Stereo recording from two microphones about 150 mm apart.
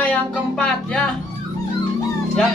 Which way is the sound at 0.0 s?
5° left (ahead or behind).